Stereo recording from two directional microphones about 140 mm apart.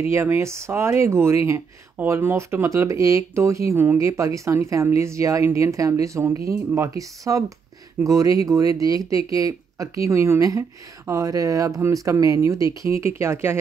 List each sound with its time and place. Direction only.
0.0 s speech: 20° right (ahead or behind)